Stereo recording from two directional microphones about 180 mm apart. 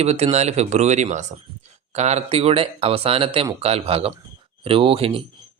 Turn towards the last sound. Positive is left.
turn(degrees=-30)  # may be behind; listen again after turning